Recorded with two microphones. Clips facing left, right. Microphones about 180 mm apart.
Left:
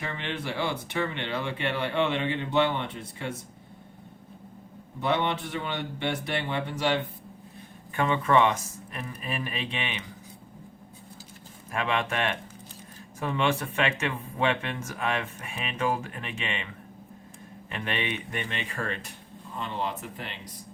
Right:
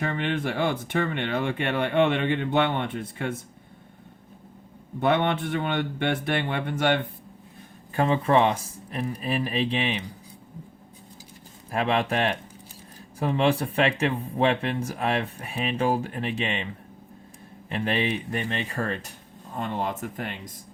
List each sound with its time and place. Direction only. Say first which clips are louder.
0.0 s speech: right 7 dB; 50° right (ahead or behind)
4.9 s a man's voice: right 4 dB; 55° right (ahead or behind)
7.9 s speech: right 2 dB; 35° right (ahead or behind)
11.7 s speech: right 4 dB; 35° right (ahead or behind)
17.7 s speech: right 6 dB; 35° right (ahead or behind)